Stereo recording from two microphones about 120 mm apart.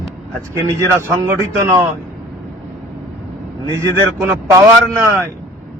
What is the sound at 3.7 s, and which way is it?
Speech, 25° right (ahead or behind).